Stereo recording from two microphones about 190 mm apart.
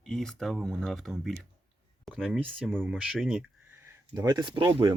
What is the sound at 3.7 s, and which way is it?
Speech, 15° right (ahead or behind).